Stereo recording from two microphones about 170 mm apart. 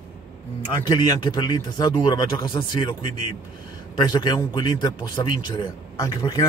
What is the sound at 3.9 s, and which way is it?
A man's voice, 25° left (ahead or behind).